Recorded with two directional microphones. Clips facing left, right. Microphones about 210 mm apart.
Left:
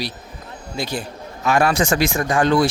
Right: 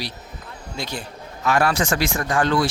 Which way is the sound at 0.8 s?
5° left (ahead or behind).